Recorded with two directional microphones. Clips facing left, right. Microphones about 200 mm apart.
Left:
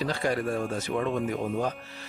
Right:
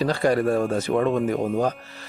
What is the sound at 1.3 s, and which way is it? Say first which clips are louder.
Speech: right 6 dB; 40° right (ahead or behind).